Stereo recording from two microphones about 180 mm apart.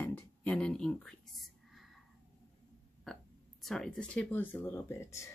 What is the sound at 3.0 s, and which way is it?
Speech, centre (ahead or behind).